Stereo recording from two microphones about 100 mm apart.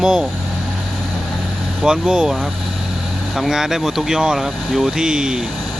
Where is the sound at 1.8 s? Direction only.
5° right (ahead or behind).